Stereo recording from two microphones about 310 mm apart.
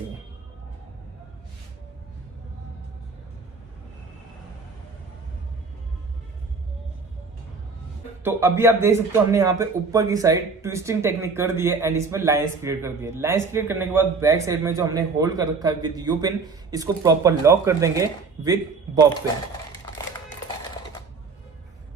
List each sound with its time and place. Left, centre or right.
8.2 s a man's voice: centre